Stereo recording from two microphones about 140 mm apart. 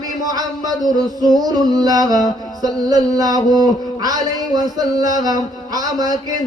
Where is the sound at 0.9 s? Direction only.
25° right (ahead or behind).